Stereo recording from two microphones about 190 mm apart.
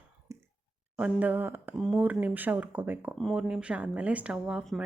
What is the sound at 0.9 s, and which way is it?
Speech, 5° right (ahead or behind).